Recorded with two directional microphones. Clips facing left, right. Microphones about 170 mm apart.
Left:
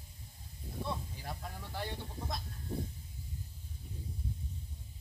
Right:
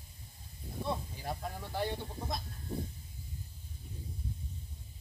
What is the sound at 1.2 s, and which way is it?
Snake, 15° right (ahead or behind).